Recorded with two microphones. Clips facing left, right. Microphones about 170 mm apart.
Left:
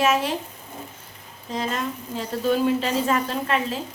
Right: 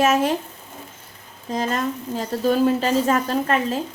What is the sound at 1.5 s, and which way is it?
A woman's voice, 40° right (ahead or behind).